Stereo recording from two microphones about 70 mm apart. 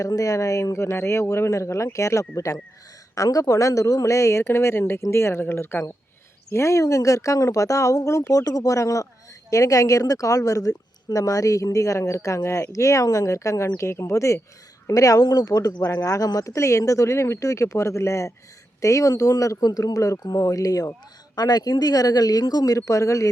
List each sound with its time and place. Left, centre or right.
0.0 s a woman's voice: left
3.2 s a woman's voice: left
8.4 s a woman's voice: left
20.2 s speech: left
20.5 s speech: left
21.3 s speech: left